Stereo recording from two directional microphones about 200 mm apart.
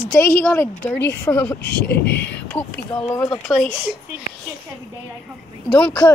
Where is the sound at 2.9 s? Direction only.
20° left (ahead or behind).